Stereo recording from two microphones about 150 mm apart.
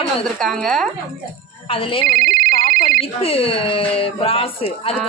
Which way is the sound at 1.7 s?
35° left (ahead or behind).